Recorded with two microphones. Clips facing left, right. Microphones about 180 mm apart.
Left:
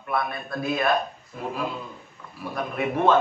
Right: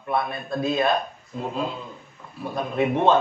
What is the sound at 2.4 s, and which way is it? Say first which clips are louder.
Speech: right 4 dB; 25° right (ahead or behind).